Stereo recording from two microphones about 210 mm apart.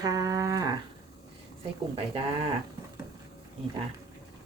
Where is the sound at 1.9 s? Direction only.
25° right (ahead or behind).